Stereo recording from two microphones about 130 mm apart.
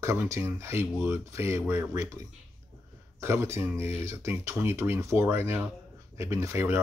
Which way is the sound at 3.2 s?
20° right (ahead or behind).